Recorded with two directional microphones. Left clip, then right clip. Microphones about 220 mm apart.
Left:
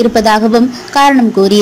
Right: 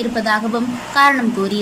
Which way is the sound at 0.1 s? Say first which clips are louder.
Left 9 dB; 25° left (ahead or behind).